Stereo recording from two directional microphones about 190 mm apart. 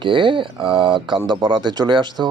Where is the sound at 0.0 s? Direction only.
25° right (ahead or behind).